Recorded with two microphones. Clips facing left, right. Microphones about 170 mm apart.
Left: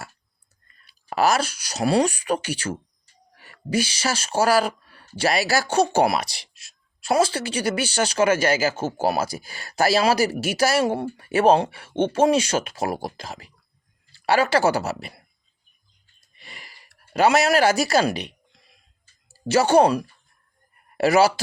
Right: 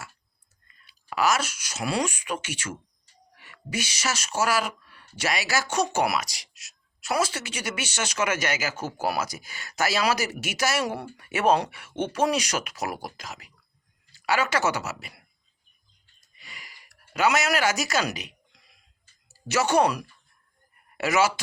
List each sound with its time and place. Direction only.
0.7 s speech: 40° left (ahead or behind)
16.4 s a sound: 35° left (ahead or behind)
19.3 s speech: 30° left (ahead or behind)